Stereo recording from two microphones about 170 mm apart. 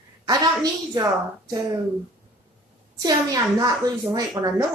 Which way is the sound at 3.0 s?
20° right (ahead or behind).